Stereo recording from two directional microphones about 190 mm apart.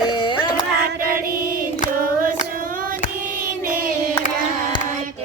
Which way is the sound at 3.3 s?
45° right (ahead or behind).